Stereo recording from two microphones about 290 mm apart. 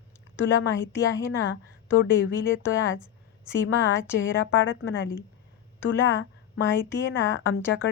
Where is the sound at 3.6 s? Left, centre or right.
Left.